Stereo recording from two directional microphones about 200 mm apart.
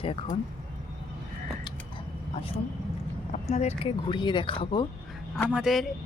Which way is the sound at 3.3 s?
35° left (ahead or behind).